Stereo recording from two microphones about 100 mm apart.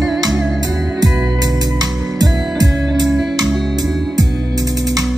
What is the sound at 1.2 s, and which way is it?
Music, 40° right (ahead or behind).